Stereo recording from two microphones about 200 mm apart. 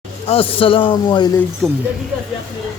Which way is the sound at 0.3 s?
30° left (ahead or behind).